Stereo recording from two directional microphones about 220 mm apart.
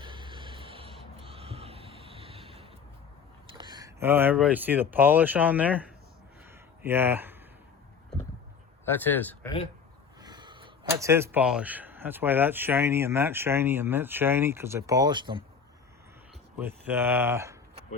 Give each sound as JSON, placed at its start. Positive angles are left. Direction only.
{"t": 0.0, "sound": "a sound", "side_deg": -20}
{"t": 3.6, "sound": "speech", "side_deg": -20}
{"t": 6.8, "sound": "speech", "side_deg": -10}
{"t": 8.9, "sound": "speech", "side_deg": 10}
{"t": 10.2, "sound": "speech", "side_deg": -20}
{"t": 16.6, "sound": "speech", "side_deg": -10}